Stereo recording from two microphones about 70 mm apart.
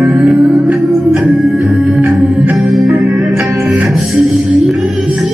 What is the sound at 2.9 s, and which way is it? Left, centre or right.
Music, right.